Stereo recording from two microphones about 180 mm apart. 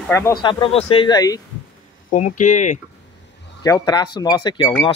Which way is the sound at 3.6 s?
20° left (ahead or behind).